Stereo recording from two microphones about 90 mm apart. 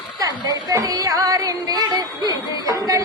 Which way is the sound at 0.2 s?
40° right (ahead or behind).